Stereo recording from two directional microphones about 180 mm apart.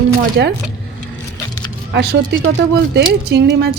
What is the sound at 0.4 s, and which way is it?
Speech, 75° right (ahead or behind).